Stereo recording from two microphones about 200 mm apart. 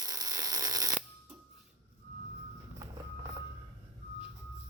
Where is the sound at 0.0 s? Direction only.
20° right (ahead or behind).